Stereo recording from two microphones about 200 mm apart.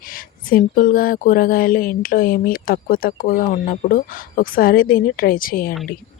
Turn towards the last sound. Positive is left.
turn(degrees=45)  # may be behind; listen again after turning